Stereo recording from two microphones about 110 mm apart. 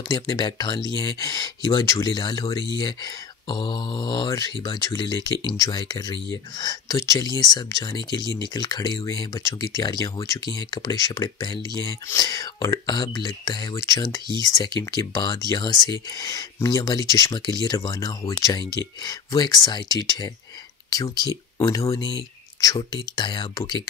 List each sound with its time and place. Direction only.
0.1 s speech: 35° left (ahead or behind)